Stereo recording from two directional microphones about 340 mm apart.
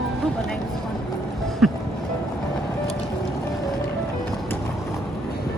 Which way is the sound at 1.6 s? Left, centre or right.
Centre.